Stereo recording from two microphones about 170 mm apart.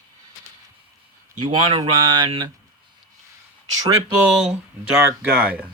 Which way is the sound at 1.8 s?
25° right (ahead or behind).